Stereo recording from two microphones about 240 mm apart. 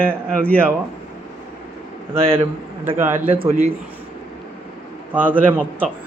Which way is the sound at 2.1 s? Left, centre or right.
Right.